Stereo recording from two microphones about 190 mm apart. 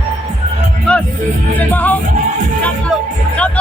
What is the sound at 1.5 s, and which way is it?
Speech, 10° left (ahead or behind).